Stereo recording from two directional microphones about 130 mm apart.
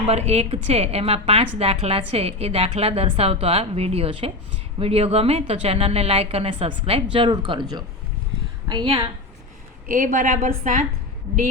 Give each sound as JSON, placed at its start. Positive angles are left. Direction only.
{"t": 0.1, "sound": "a woman's voice", "side_deg": -55}
{"t": 8.7, "sound": "a woman's voice", "side_deg": -35}
{"t": 9.8, "sound": "a woman's voice", "side_deg": -90}